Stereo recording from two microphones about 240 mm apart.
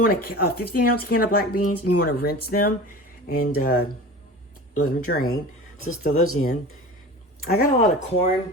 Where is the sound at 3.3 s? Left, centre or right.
Left.